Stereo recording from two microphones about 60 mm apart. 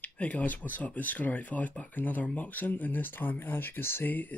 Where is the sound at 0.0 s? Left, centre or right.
Left.